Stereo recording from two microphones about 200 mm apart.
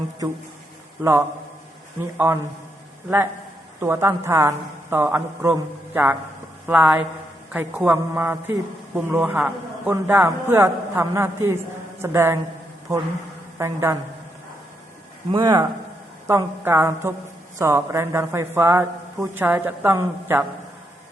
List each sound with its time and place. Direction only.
1.0 s a man's voice: 10° right (ahead or behind)
3.8 s a man's voice: 10° right (ahead or behind)
13.6 s a man's voice: 15° right (ahead or behind)
15.3 s a man's voice: 20° right (ahead or behind)